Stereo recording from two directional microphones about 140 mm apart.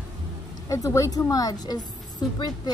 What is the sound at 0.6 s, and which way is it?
A woman's voice, 25° left (ahead or behind).